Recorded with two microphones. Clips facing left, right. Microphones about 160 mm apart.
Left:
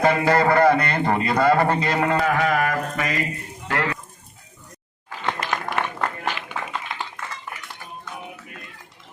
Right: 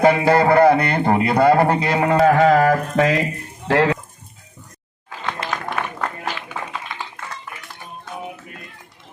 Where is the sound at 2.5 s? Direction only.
80° right.